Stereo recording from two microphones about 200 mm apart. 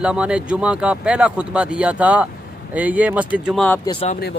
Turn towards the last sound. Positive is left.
turn(degrees=25)  # may be behind; listen again after turning